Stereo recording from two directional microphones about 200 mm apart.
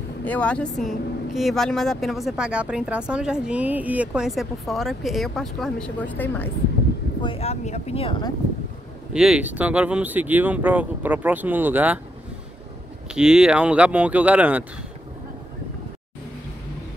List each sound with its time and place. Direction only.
0.2 s speech: 5° left (ahead or behind)
7.2 s speech: 30° left (ahead or behind)
9.1 s speech: 5° right (ahead or behind)
13.1 s speech: 5° right (ahead or behind)